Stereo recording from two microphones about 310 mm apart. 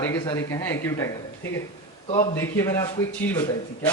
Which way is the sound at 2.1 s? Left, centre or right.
Centre.